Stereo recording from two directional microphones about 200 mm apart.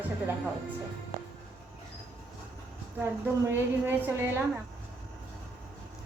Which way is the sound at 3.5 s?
10° right (ahead or behind).